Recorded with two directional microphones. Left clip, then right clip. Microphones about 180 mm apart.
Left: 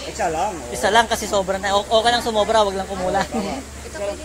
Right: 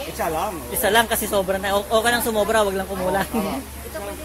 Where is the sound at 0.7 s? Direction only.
25° right (ahead or behind).